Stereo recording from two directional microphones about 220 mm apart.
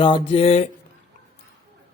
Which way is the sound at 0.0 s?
20° left (ahead or behind).